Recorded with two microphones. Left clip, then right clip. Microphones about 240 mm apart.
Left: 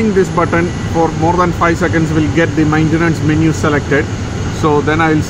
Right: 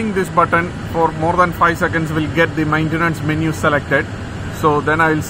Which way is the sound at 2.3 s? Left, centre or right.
Centre.